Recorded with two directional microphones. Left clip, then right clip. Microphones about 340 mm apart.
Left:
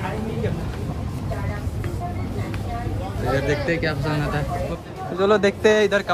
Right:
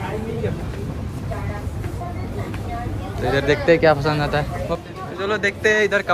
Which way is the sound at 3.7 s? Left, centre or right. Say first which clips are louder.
Right 9 dB; centre.